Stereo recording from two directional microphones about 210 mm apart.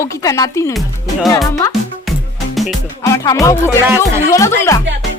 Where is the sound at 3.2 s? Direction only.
15° left (ahead or behind).